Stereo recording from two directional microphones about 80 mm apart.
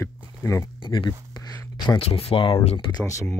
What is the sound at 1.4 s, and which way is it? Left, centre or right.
Speech, left.